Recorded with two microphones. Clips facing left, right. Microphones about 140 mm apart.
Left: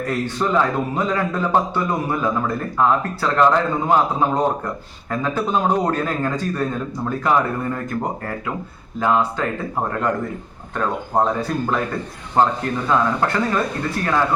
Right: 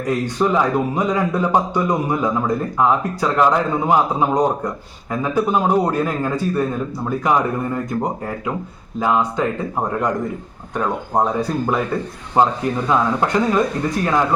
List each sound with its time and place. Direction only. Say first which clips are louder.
0.0 s a man's voice: right 3 dB; 15° right (ahead or behind)
9.0 s a man's voice: right 1 dB; 15° right (ahead or behind)
10.8 s a man's voice: right 1 dB; 10° right (ahead or behind)